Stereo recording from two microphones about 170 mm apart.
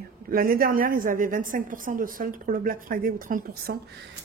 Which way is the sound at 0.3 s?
60° right (ahead or behind).